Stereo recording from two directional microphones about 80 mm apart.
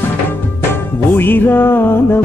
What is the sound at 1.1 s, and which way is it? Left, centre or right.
Music, left.